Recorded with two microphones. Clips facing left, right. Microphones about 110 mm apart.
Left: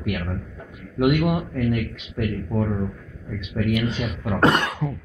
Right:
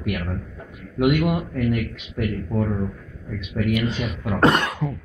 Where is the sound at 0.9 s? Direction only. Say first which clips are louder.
Even; 25° left (ahead or behind).